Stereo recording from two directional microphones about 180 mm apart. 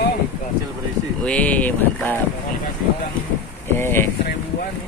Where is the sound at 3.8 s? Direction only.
10° left (ahead or behind).